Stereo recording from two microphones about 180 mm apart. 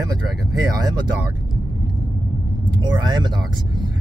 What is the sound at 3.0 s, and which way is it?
Speech, 25° right (ahead or behind).